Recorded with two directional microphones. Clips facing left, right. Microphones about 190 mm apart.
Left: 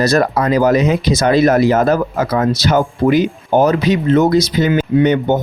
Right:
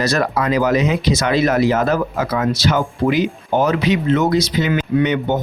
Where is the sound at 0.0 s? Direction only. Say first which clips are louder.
Left 4 dB; 40° left (ahead or behind).